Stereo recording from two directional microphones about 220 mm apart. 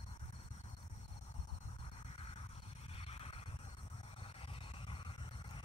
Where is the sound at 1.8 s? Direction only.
25° left (ahead or behind).